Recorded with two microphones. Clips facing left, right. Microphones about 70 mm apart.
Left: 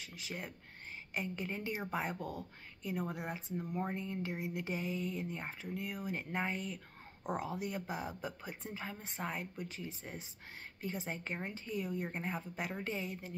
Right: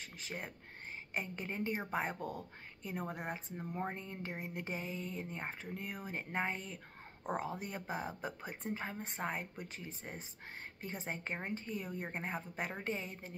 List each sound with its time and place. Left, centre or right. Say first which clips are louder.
0.0 s a woman's voice: even; right
1.8 s speech: right 1 dB; centre
2.0 s a woman's voice: even; right
3.5 s a woman's voice: left 5 dB; right
6.1 s a woman's voice: right 2 dB; right